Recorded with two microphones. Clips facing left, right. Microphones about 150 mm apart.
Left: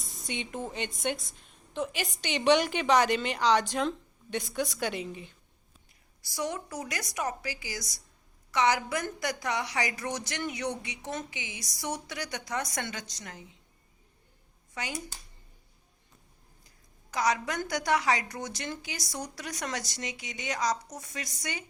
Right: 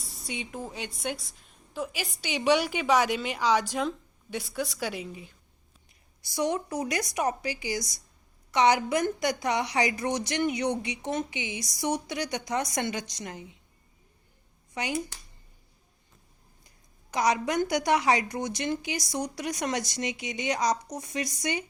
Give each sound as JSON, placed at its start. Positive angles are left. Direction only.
{"t": 0.0, "sound": "a woman's voice", "side_deg": -5}
{"t": 6.2, "sound": "a woman's voice", "side_deg": -20}
{"t": 14.8, "sound": "a woman's voice", "side_deg": -15}
{"t": 17.1, "sound": "a woman's voice", "side_deg": -20}